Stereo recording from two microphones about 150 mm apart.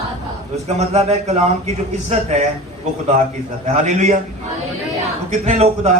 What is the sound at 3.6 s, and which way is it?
Speech, 50° right (ahead or behind).